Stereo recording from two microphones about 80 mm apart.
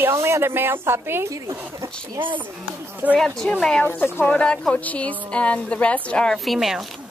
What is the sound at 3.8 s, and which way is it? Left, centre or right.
Speech, left.